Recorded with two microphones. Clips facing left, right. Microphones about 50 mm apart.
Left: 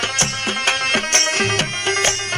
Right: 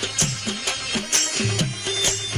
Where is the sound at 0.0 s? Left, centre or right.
Left.